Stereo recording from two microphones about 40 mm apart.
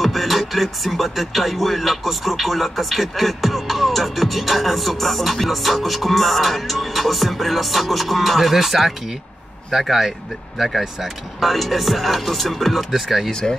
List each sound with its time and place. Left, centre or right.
0.0 s music: centre
13.3 s speech: centre